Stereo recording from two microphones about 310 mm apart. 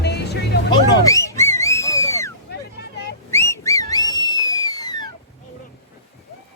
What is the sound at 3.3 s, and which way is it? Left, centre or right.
Whistling, centre.